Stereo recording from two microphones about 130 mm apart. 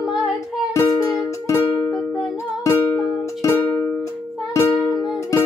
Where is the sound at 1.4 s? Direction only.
20° left (ahead or behind).